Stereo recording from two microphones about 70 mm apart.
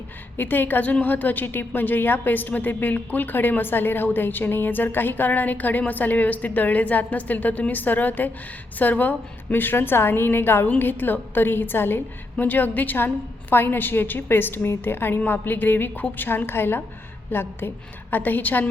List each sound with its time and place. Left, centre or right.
0.3 s a woman's voice: left